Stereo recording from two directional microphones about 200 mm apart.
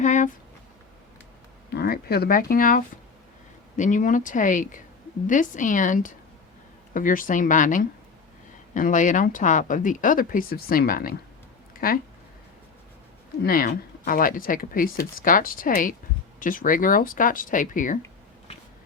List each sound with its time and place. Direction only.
0.0 s a sound: 35° left (ahead or behind)
1.7 s speech: 50° left (ahead or behind)
13.4 s speech: 45° left (ahead or behind)